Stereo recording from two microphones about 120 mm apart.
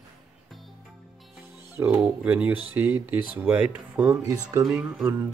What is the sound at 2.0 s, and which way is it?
Speech, 15° right (ahead or behind).